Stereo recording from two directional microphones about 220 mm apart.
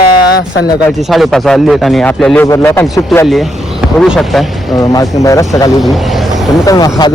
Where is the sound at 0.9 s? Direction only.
Centre (ahead or behind).